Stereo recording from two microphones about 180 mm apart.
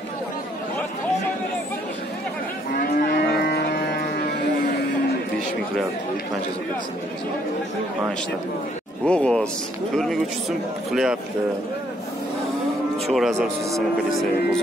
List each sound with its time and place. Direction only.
2.7 s cattle: 55° left (ahead or behind)
9.0 s speech: 5° left (ahead or behind)
13.1 s speech: centre (ahead or behind)